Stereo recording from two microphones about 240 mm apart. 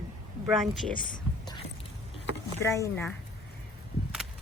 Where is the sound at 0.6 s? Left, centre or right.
Centre.